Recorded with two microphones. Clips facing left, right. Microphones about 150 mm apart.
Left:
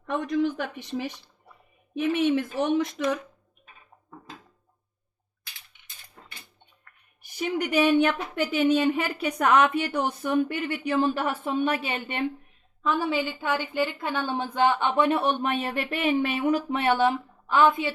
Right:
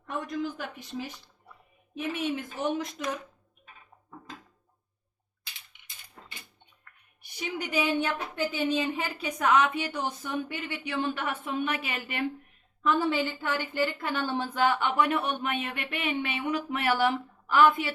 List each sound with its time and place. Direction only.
0.2 s speech: 75° left (ahead or behind)
7.2 s a sound: 50° left (ahead or behind)
7.7 s a woman's voice: 75° left (ahead or behind); by 12.2 s 30° left (ahead or behind)
12.8 s a woman's voice: 10° left (ahead or behind)